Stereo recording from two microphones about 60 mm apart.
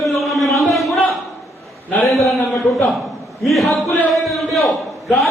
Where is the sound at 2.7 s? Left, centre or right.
Left.